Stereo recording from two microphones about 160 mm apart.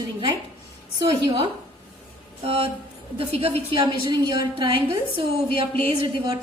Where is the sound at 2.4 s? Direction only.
35° right (ahead or behind).